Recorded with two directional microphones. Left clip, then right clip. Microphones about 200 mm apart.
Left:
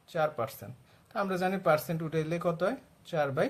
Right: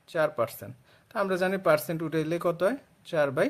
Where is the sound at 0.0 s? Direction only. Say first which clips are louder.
Right 4 dB; 35° right (ahead or behind).